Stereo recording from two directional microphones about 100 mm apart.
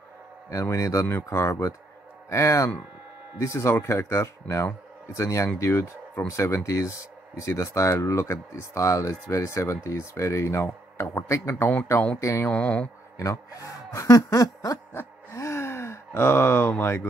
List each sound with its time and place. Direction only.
0.5 s speech: 30° left (ahead or behind); by 12.2 s 15° left (ahead or behind)
12.2 s speech: 30° left (ahead or behind)
12.4 s speech: 15° left (ahead or behind)
13.2 s speech: 30° left (ahead or behind)
15.0 s gasp: 25° left (ahead or behind)